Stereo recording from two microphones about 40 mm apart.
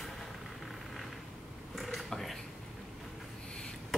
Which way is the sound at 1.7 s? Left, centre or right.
Centre.